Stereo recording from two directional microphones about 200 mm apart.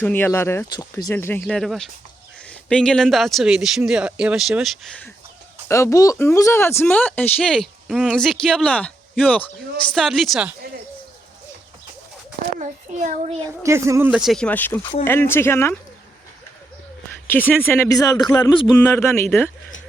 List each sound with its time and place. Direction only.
0.0 s speech: 10° left (ahead or behind)
5.6 s speech: 15° left (ahead or behind)
12.5 s a child's voice: 35° right (ahead or behind)
13.6 s speech: 15° right (ahead or behind); by 15.8 s 10° left (ahead or behind)
17.2 s speech: 10° left (ahead or behind)
18.9 s speech: 10° left (ahead or behind)